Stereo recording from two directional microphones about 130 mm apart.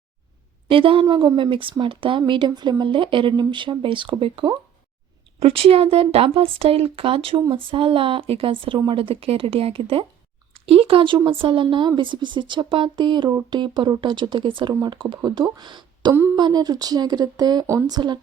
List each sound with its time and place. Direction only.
0.7 s speech: 45° right (ahead or behind)
16.1 s speech: 20° right (ahead or behind)
16.4 s speech: 30° right (ahead or behind)